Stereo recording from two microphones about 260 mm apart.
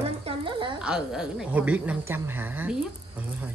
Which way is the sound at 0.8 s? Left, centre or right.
Centre.